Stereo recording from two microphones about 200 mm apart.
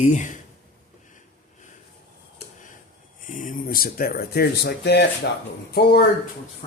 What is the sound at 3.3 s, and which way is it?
Speech, 40° left (ahead or behind).